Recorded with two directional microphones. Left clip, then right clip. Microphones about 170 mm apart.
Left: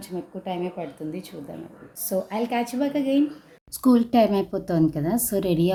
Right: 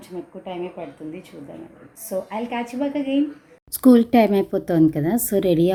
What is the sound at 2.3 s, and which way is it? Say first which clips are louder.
Speech: left 1 dB; 15° left (ahead or behind).